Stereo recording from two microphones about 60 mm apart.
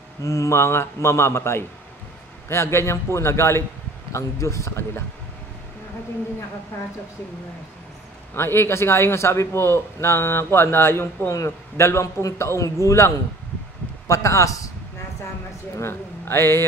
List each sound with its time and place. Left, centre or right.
0.2 s a man's voice: left
8.4 s a man's voice: left
15.8 s a man's voice: left